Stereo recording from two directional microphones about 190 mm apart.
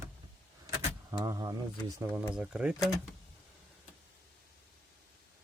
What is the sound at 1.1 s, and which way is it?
Speech, 20° right (ahead or behind).